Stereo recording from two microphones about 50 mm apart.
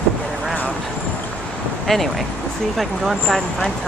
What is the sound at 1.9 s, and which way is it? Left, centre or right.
Speech, centre.